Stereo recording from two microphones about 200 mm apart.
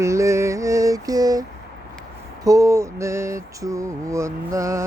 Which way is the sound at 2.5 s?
15° right (ahead or behind).